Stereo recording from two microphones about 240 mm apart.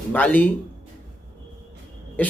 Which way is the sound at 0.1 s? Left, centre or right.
Centre.